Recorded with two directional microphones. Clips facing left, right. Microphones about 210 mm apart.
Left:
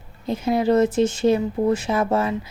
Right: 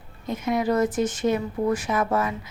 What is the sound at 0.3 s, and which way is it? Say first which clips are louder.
A woman's voice: left 4 dB; 30° left (ahead or behind).